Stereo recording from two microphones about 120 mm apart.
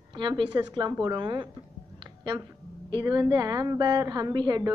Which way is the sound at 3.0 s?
30° right (ahead or behind).